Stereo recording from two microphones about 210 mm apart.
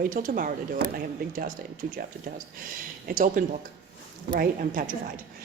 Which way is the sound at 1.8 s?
50° right (ahead or behind).